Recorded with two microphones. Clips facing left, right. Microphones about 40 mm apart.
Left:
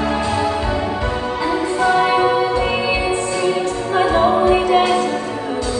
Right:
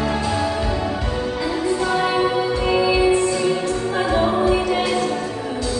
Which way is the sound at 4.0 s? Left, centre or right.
Left.